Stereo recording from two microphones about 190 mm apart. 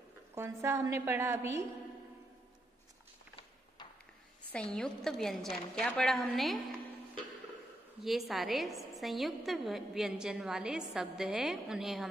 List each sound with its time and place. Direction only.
0.3 s a woman's voice: 15° right (ahead or behind)
4.5 s a woman's voice: 5° left (ahead or behind)
8.0 s a woman's voice: centre (ahead or behind)